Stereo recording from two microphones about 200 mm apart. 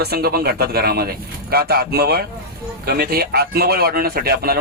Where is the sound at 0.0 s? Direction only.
50° right (ahead or behind).